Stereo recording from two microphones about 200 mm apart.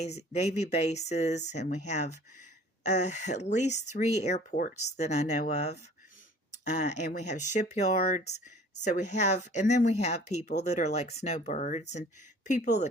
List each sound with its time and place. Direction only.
0.0 s speech: 35° left (ahead or behind)